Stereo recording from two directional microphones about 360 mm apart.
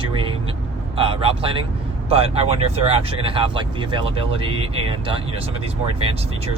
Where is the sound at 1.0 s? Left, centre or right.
Centre.